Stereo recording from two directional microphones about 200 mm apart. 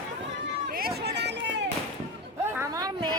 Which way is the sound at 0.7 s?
50° right (ahead or behind).